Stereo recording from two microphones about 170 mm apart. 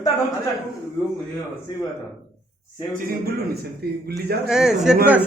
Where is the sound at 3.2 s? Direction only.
65° right (ahead or behind).